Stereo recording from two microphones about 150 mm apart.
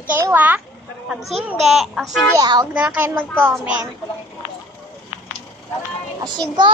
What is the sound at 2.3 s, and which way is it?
Speech, 25° right (ahead or behind).